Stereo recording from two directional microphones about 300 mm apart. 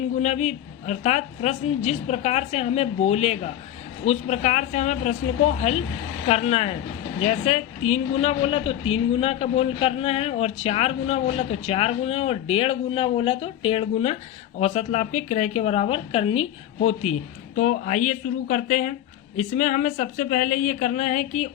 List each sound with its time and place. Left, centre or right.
0.2 s a man's voice: left